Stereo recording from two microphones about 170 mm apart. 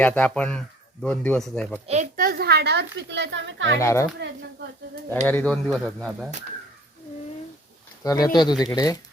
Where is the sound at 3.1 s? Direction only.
90° right.